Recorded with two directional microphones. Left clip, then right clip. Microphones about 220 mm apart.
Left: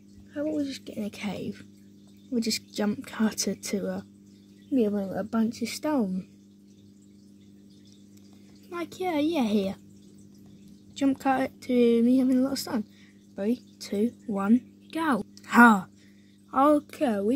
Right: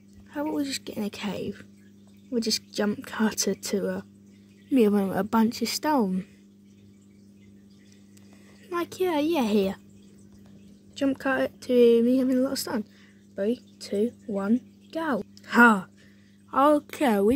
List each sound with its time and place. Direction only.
0.3 s a woman's voice: 20° right (ahead or behind)
4.6 s speech: 30° right (ahead or behind); by 6.2 s 15° right (ahead or behind)
8.6 s a woman's voice: 10° right (ahead or behind)
11.0 s a woman's voice: centre (ahead or behind)
16.9 s speech: 25° right (ahead or behind)